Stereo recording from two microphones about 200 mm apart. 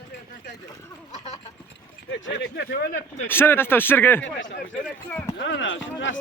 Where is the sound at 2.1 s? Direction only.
65° left (ahead or behind).